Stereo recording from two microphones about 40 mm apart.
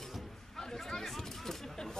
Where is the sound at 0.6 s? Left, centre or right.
Centre.